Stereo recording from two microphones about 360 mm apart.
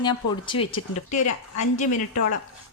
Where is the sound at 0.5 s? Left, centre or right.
Left.